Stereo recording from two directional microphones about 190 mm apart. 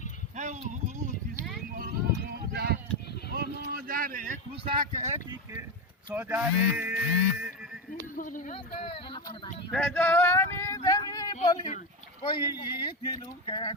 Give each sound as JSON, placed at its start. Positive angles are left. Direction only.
{"t": 0.3, "sound": "a sound", "side_deg": -40}
{"t": 2.3, "sound": "clip-clop", "side_deg": -55}
{"t": 3.6, "sound": "a sound", "side_deg": -50}
{"t": 4.8, "sound": "speech", "side_deg": -40}
{"t": 6.1, "sound": "speech", "side_deg": -10}
{"t": 8.1, "sound": "speech", "side_deg": 45}
{"t": 9.7, "sound": "male singing", "side_deg": 5}
{"t": 10.8, "sound": "a sound", "side_deg": 20}
{"t": 11.4, "sound": "speech", "side_deg": 35}
{"t": 12.2, "sound": "speech", "side_deg": 20}